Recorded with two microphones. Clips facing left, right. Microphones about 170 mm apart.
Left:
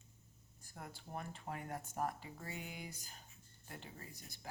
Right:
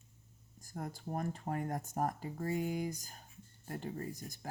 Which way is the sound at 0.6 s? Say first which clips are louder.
Right 9 dB; 40° right (ahead or behind).